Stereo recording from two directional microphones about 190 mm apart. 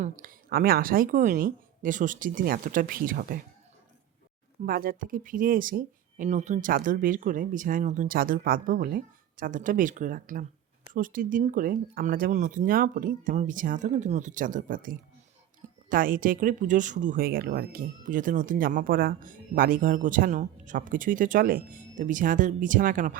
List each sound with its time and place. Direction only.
0.0 s speech: 45° right (ahead or behind)
4.6 s speech: 50° right (ahead or behind)